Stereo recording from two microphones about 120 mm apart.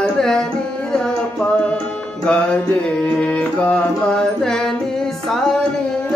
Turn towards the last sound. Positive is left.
turn(degrees=5)  # may be behind; listen again after turning